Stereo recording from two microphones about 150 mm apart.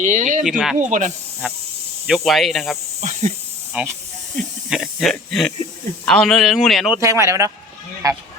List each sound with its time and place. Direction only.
0.0 s speech: 55° right (ahead or behind)
0.4 s speech: centre (ahead or behind)
0.9 s speech: 55° right (ahead or behind)
2.0 s speech: centre (ahead or behind)
3.0 s speech: 50° right (ahead or behind)
3.7 s speech: 10° right (ahead or behind)
7.0 s speech: 20° right (ahead or behind)